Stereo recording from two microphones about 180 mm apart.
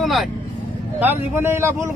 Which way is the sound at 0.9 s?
10° right (ahead or behind).